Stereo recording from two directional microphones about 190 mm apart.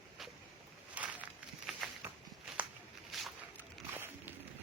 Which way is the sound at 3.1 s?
Centre (ahead or behind).